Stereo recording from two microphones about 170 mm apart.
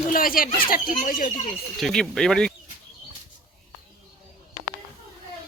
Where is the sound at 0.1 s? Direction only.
55° left (ahead or behind).